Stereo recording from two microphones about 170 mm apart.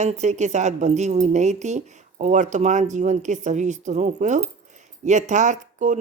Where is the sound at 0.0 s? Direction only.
40° right (ahead or behind).